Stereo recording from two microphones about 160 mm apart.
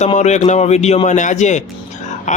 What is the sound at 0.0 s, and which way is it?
A man's voice, 45° left (ahead or behind).